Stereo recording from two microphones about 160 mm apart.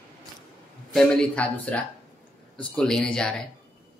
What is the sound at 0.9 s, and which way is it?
Speech, 5° left (ahead or behind).